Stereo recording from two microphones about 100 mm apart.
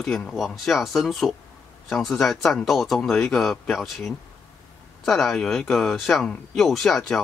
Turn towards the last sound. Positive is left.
turn(degrees=5)  # may be behind; listen again after turning